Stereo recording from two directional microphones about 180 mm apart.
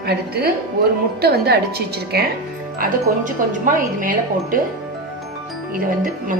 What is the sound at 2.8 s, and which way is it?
Speech, 50° right (ahead or behind).